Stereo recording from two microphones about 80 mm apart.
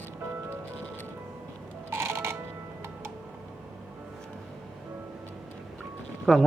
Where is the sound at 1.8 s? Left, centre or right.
Right.